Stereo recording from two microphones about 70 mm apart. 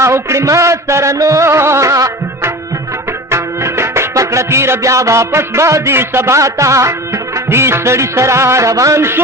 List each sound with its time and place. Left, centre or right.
0.0 s music: right
9.0 s a man's voice: right